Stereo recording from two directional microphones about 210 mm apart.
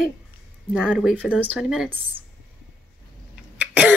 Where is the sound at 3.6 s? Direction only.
5° right (ahead or behind).